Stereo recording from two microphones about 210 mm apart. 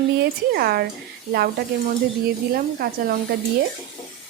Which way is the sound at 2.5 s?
45° right (ahead or behind).